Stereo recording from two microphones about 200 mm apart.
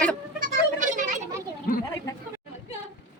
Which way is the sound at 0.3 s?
40° right (ahead or behind).